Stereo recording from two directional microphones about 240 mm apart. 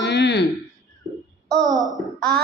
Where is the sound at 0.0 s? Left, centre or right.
Left.